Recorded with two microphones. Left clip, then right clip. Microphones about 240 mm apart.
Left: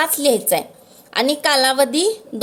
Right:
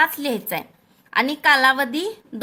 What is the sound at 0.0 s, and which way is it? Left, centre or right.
A woman's voice, centre.